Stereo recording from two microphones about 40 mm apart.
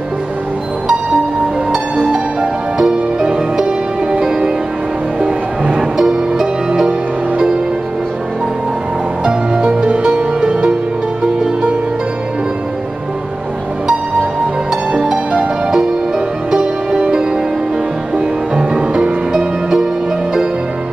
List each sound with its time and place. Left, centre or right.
2.4 s music: centre
5.8 s music: centre
9.2 s music: right
14.9 s music: right
19.3 s music: centre